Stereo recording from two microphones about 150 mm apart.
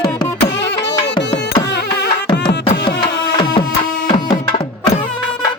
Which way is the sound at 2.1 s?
90° left.